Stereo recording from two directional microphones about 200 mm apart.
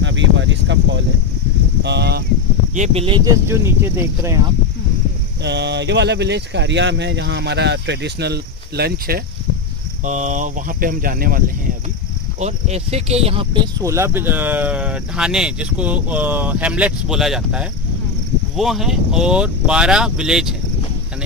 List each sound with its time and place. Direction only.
0.0 s speech: 65° right (ahead or behind)
2.7 s speech: 35° right (ahead or behind); by 4.4 s 10° right (ahead or behind)
5.4 s speech: 60° right (ahead or behind)
10.0 s speech: 40° right (ahead or behind)
12.4 s speech: 35° right (ahead or behind); by 20.5 s 5° right (ahead or behind)